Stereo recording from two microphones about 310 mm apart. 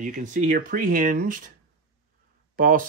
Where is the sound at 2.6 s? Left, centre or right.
Right.